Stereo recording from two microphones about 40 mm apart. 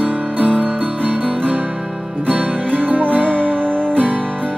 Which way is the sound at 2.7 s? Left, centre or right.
Right.